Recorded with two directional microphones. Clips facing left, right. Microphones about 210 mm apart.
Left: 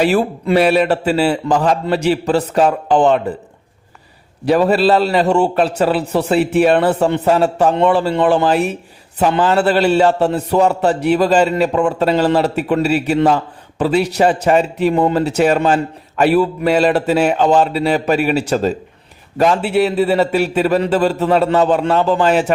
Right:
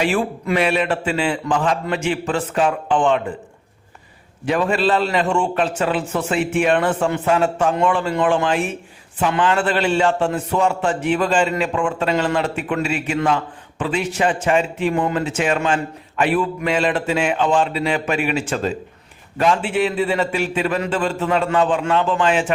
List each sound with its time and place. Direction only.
0.0 s a man's voice: 40° left (ahead or behind)
4.4 s a man's voice: 35° left (ahead or behind)